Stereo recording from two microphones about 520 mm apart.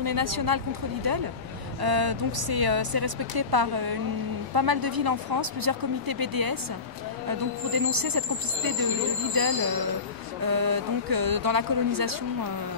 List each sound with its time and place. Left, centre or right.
0.0 s speech: right
1.8 s speech: right